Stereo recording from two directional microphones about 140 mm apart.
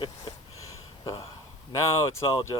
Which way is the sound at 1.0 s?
25° left (ahead or behind).